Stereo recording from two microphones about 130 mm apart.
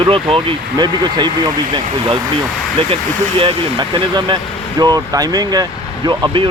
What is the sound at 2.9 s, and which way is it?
Speech, 45° right (ahead or behind).